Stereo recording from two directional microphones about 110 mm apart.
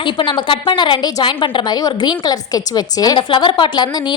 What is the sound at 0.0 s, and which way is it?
A woman's voice, 45° left (ahead or behind).